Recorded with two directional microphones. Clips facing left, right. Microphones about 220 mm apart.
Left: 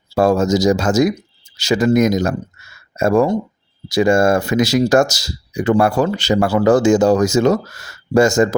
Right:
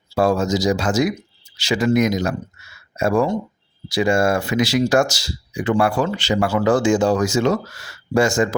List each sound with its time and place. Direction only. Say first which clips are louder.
0.1 s speech: left 4 dB; 45° left (ahead or behind)